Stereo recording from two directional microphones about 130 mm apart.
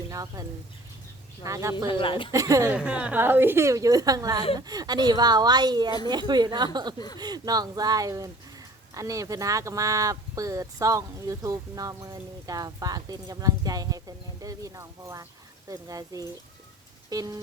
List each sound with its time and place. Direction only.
0.1 s speech: 25° right (ahead or behind)
1.5 s speech: 25° right (ahead or behind)
1.9 s speech: 40° left (ahead or behind)
2.3 s speech: 25° right (ahead or behind)
2.7 s speech: 10° right (ahead or behind); by 17.4 s 30° right (ahead or behind)